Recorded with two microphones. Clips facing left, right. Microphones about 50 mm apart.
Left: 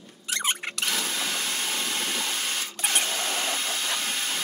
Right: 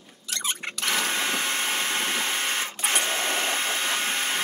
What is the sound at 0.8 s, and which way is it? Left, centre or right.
Sewing machine, right.